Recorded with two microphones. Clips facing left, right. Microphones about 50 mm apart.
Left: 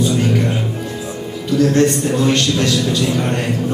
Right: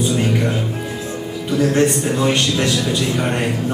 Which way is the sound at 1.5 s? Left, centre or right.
Centre.